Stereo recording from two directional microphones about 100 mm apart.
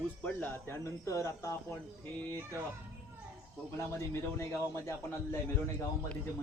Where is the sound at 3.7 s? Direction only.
25° left (ahead or behind).